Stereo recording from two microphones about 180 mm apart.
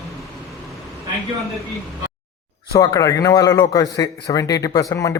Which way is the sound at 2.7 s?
20° left (ahead or behind).